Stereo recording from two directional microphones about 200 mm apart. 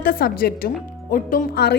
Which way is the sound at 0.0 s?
45° left (ahead or behind).